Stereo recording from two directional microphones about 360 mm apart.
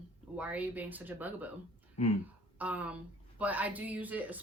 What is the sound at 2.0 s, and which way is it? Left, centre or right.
Speech, centre.